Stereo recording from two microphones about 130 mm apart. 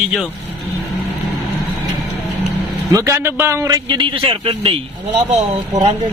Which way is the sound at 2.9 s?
20° right (ahead or behind).